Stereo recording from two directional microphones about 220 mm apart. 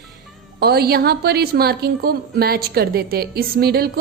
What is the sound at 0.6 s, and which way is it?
A woman's voice, 45° right (ahead or behind).